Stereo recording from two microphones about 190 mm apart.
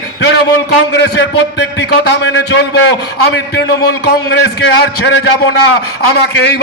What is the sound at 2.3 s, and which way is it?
A man's voice, 75° left (ahead or behind).